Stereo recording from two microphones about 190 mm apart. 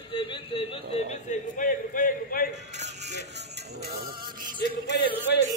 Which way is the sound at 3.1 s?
60° right (ahead or behind).